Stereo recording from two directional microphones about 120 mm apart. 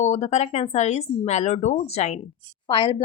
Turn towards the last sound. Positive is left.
turn(degrees=45)  # may be behind; listen again after turning